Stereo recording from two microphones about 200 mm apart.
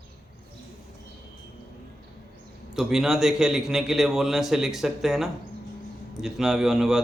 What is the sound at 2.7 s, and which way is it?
Speech, centre (ahead or behind).